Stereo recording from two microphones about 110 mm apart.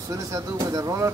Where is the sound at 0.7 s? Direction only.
30° right (ahead or behind).